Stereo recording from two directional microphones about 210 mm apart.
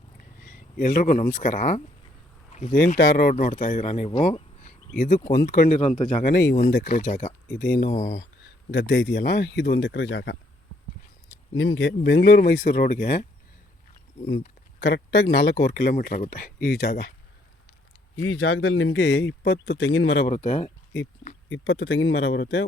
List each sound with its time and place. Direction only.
0.3 s a sound: 45° left (ahead or behind)
1.4 s speech: 40° left (ahead or behind)
8.7 s speech: 55° left (ahead or behind)
11.5 s speech: 65° left (ahead or behind); by 13.2 s 45° left (ahead or behind)
14.8 s speech: 55° left (ahead or behind)
18.2 s speech: 70° left (ahead or behind)
20.2 s speech: 35° left (ahead or behind)
21.5 s speech: 65° left (ahead or behind)